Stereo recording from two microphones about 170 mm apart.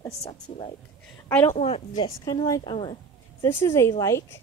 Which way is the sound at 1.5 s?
40° left (ahead or behind).